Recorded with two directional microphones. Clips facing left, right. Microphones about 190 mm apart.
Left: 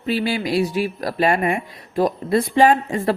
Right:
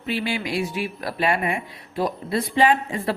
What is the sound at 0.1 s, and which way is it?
Speech, 40° left (ahead or behind).